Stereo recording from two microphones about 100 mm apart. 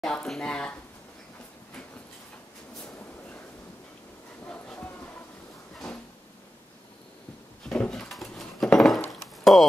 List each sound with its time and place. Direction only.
0.0 s speech: 5° left (ahead or behind)
4.7 s a sound: 20° left (ahead or behind)
7.6 s dishes: 10° left (ahead or behind)